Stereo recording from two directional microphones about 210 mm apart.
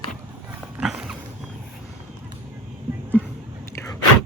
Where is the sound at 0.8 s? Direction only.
Centre (ahead or behind).